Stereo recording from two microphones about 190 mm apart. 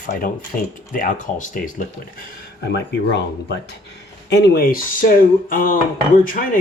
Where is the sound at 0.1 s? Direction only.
50° left (ahead or behind).